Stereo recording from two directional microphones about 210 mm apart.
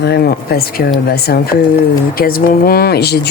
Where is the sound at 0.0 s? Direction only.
50° left (ahead or behind).